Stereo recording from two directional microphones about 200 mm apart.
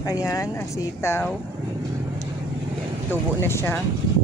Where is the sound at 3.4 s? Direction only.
10° left (ahead or behind).